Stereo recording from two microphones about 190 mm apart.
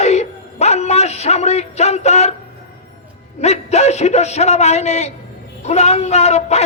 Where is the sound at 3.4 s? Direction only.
35° left (ahead or behind).